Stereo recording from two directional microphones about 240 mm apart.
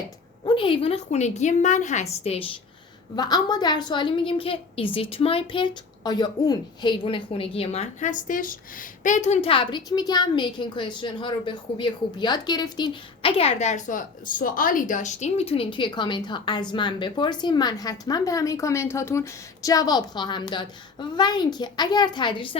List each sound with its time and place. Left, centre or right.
0.4 s a woman's voice: left